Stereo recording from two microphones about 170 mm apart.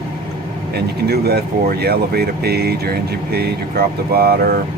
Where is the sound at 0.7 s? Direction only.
70° right (ahead or behind).